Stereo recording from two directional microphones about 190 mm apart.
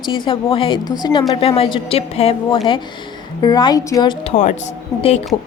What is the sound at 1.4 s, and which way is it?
A woman's voice, 30° left (ahead or behind).